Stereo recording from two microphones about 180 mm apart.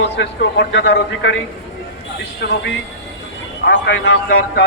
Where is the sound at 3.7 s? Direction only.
75° left (ahead or behind).